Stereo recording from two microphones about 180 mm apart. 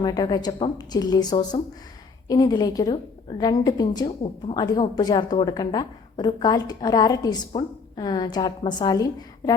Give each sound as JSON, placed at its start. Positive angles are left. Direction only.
{"t": 0.0, "sound": "a woman's voice", "side_deg": 20}